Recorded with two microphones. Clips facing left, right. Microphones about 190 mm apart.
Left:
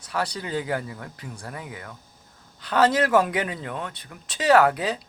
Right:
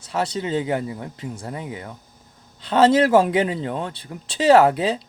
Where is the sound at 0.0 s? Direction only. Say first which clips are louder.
Right 5 dB; 25° right (ahead or behind).